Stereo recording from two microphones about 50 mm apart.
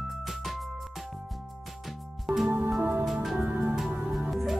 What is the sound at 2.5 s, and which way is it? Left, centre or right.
Music, right.